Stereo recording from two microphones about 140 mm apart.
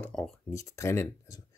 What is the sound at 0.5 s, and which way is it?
Speech, 20° left (ahead or behind).